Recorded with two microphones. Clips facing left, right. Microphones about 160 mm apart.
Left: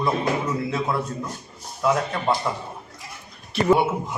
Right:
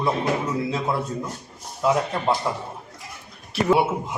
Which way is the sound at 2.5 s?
15° right (ahead or behind).